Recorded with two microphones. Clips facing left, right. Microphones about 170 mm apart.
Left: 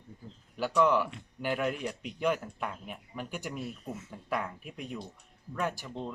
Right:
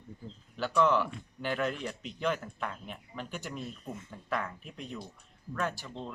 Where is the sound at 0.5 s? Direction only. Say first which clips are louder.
Left 1 dB; 10° left (ahead or behind).